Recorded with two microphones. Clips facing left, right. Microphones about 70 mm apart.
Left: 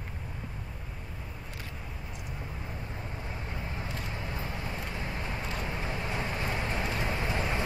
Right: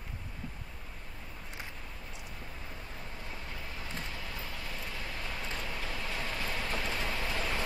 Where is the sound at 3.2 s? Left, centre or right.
Left.